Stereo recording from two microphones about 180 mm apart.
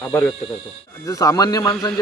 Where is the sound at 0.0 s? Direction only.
10° left (ahead or behind).